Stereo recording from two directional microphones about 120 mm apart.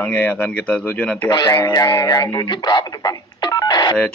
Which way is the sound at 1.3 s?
35° left (ahead or behind).